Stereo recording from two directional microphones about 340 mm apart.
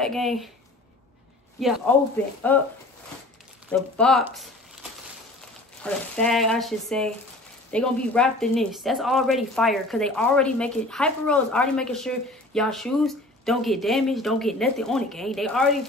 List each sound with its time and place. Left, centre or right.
0.0 s speech: centre
1.6 s speech: centre
3.9 s speech: centre
5.8 s speech: centre